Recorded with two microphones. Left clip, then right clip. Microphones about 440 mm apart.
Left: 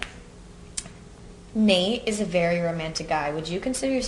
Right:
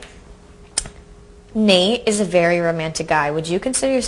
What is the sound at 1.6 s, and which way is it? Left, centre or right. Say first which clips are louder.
A woman's voice: right 7 dB; right.